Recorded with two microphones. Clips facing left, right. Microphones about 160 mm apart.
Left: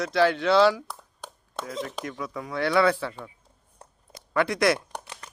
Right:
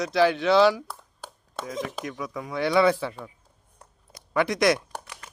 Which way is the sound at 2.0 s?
15° right (ahead or behind).